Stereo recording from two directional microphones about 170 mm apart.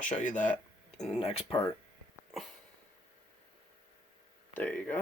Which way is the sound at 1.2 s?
35° left (ahead or behind).